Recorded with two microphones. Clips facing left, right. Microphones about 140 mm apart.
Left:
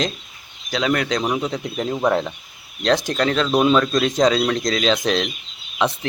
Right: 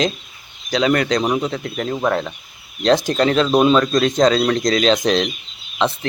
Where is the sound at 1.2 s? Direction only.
10° right (ahead or behind).